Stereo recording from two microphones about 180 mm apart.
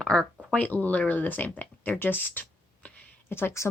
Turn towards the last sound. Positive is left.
turn(degrees=15)  # may be behind; listen again after turning